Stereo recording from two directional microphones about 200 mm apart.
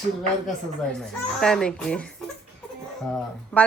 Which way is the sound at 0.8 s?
Centre (ahead or behind).